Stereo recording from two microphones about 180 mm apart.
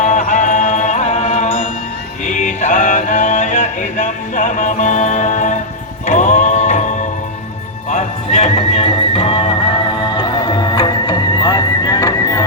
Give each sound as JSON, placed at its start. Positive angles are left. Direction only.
{"t": 0.0, "sound": "music", "side_deg": 40}